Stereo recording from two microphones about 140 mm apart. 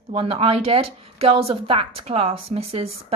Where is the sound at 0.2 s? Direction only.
40° right (ahead or behind).